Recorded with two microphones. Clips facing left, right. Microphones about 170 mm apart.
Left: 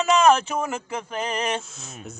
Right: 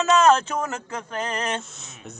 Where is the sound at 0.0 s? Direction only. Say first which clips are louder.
Even; 10° left (ahead or behind).